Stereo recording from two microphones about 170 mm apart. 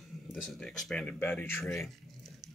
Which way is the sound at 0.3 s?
Centre (ahead or behind).